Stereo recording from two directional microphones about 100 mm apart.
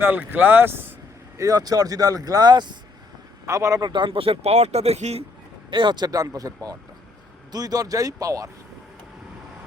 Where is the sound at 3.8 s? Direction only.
50° right (ahead or behind); by 5.2 s 90° right.